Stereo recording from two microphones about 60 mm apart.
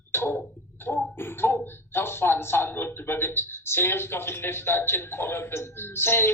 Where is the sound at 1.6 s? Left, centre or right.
Left.